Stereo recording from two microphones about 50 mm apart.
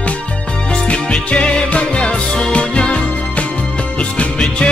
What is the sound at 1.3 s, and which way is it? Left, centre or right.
Music, centre.